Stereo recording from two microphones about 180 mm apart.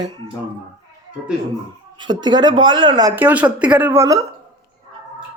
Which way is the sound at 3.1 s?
10° right (ahead or behind).